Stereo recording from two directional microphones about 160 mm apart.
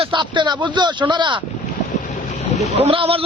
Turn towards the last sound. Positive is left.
turn(degrees=-35)  # may be behind; listen again after turning